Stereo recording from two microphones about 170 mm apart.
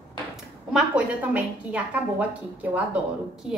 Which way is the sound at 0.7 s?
10° right (ahead or behind).